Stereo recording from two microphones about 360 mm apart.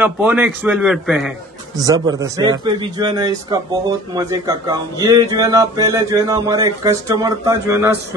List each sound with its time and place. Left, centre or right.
0.0 s a man's voice: centre